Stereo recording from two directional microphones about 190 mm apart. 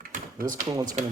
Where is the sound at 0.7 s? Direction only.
20° right (ahead or behind).